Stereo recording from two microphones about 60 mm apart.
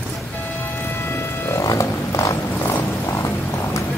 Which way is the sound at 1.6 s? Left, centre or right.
Left.